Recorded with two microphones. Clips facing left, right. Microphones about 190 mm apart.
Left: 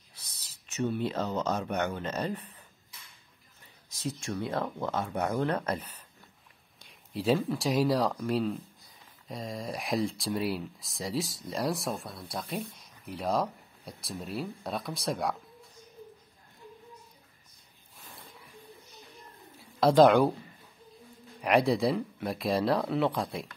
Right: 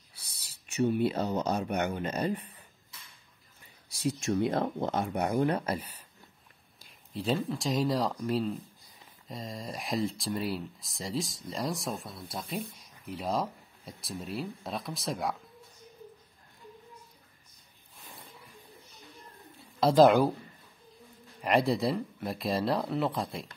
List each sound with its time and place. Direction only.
0.2 s speech: 10° right (ahead or behind)
3.9 s speech: 15° right (ahead or behind)
6.8 s speech: centre (ahead or behind)
19.8 s speech: centre (ahead or behind)
21.4 s speech: centre (ahead or behind)